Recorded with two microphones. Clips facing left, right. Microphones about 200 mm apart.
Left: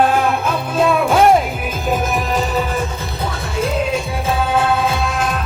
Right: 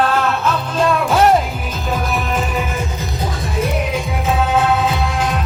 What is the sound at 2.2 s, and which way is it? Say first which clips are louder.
Music: left 2 dB; 40° left (ahead or behind).